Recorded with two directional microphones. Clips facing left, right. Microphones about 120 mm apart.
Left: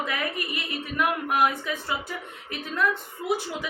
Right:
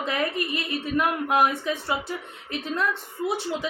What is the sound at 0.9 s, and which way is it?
A woman's voice, 25° right (ahead or behind).